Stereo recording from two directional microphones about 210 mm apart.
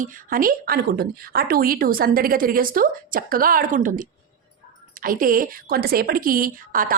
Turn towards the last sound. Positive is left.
turn(degrees=-40)  # may be behind; listen again after turning